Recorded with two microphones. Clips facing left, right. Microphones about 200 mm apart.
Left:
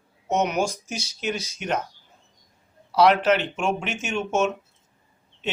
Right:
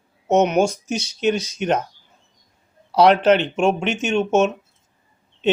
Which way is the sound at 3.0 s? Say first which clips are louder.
Right 4 dB; 30° right (ahead or behind).